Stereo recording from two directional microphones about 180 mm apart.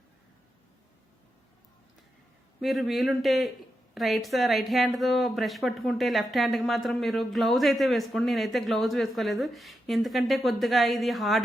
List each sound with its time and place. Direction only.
2.6 s a woman's voice: centre (ahead or behind)